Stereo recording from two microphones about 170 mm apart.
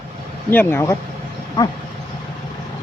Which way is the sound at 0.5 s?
10° left (ahead or behind).